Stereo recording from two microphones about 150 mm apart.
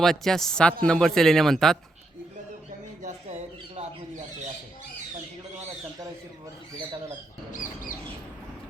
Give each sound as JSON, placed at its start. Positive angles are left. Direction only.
{"t": 0.0, "sound": "speech", "side_deg": 0}
{"t": 3.0, "sound": "squawk", "side_deg": -50}
{"t": 7.5, "sound": "a sound", "side_deg": 60}